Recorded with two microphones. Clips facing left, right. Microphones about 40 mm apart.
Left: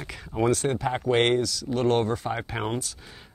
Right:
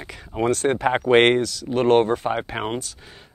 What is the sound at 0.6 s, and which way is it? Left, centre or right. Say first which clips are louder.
Speech: right 6 dB; right.